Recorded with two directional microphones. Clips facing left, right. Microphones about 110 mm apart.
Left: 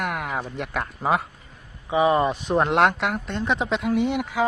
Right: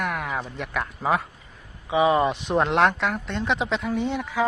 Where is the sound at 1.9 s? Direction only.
10° right (ahead or behind).